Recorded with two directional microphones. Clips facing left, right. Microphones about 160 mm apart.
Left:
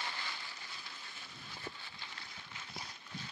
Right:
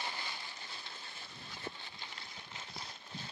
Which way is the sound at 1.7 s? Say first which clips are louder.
Right 3 dB; 20° right (ahead or behind).